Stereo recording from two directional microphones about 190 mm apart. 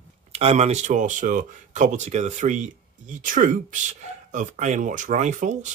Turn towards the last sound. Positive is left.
turn(degrees=-40)  # may be behind; listen again after turning